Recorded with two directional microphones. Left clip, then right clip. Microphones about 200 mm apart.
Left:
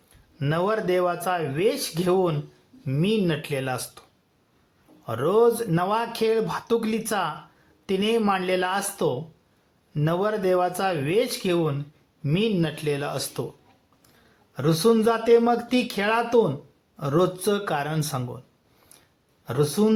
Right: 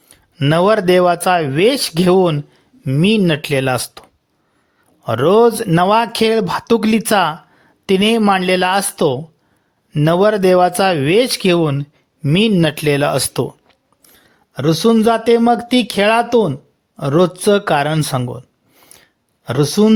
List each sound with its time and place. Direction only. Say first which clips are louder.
0.3 s speech: right 12 dB; 40° right (ahead or behind)
5.0 s speech: right 9 dB; 45° right (ahead or behind)
14.5 s speech: right 7 dB; 35° right (ahead or behind)
19.5 s speech: right 8 dB; 40° right (ahead or behind)